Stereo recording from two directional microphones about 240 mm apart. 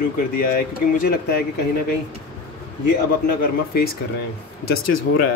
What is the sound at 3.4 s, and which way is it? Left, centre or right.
Speech, left.